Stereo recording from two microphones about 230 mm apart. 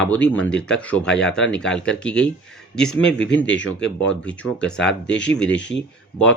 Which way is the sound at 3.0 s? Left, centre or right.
Left.